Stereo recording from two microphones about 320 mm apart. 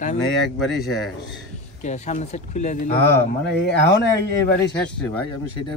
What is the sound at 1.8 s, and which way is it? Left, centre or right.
Speech, left.